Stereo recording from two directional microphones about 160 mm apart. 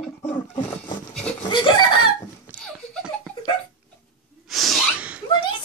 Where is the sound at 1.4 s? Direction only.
30° left (ahead or behind).